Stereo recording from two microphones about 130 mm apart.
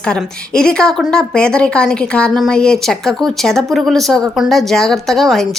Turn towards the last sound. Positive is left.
turn(degrees=0)  # may be behind; listen again after turning